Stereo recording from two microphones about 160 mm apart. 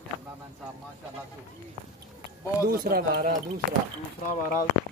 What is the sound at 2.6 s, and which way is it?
Speech, 65° right (ahead or behind).